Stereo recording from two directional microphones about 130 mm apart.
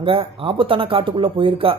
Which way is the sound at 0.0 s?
45° right (ahead or behind).